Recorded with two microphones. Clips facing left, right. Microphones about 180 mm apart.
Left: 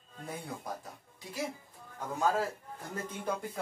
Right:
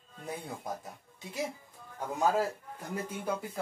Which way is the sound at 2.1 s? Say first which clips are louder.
Right 2 dB; 10° right (ahead or behind).